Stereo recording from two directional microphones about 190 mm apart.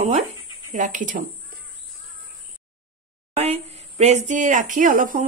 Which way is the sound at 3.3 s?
35° right (ahead or behind).